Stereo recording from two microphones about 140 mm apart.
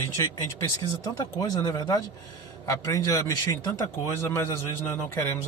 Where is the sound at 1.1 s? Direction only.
25° left (ahead or behind).